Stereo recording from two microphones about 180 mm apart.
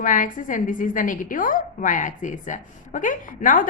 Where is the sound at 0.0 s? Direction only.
45° left (ahead or behind).